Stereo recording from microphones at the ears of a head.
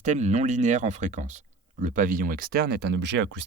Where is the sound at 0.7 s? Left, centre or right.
Right.